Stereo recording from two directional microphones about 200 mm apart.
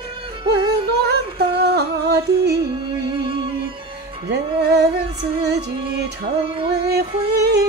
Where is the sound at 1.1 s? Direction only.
55° right (ahead or behind).